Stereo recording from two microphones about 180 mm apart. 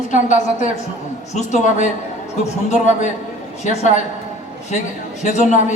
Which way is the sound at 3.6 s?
40° left (ahead or behind).